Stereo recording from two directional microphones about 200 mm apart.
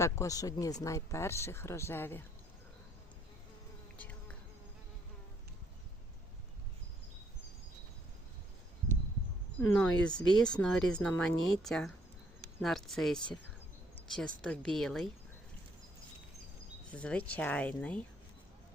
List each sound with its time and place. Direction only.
0.0 s speech: 15° left (ahead or behind)
3.9 s insect: 5° left (ahead or behind)
9.6 s speech: 10° left (ahead or behind)
16.9 s speech: 5° left (ahead or behind)